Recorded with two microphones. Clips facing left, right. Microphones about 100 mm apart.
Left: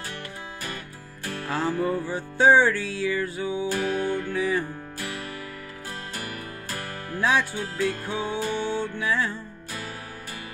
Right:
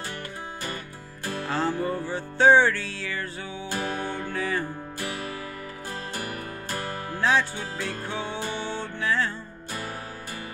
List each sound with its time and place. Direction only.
1.5 s music: 10° left (ahead or behind)
3.7 s music: 25° right (ahead or behind)
4.3 s music: 10° left (ahead or behind)
7.2 s music: 10° left (ahead or behind)